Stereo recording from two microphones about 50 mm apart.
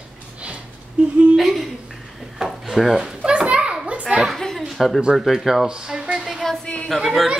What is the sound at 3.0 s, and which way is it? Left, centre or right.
Children playing, centre.